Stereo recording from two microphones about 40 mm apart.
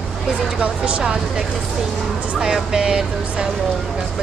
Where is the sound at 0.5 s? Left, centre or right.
Right.